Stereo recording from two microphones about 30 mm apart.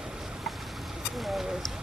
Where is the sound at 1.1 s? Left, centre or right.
Centre.